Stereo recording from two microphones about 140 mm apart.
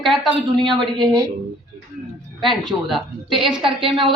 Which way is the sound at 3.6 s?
35° right (ahead or behind).